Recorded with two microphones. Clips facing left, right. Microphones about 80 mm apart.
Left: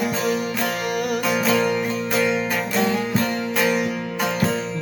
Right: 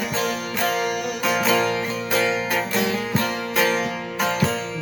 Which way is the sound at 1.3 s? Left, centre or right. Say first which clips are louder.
Right 1 dB; centre.